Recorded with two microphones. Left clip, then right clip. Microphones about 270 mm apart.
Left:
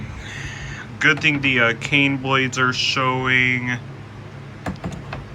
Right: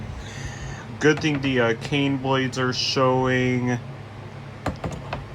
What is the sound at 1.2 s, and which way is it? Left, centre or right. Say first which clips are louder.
Speech: left 5 dB; centre.